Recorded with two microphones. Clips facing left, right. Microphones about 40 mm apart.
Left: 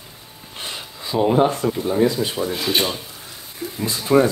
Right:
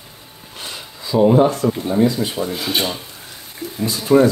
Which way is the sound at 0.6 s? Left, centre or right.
Left.